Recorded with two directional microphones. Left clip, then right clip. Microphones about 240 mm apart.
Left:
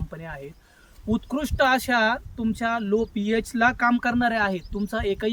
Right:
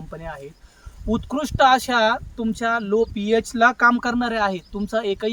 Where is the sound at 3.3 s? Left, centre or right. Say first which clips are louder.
Right 4 dB; centre.